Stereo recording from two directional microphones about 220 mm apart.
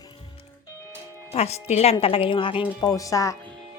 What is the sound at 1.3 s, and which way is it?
A woman's voice, 30° left (ahead or behind).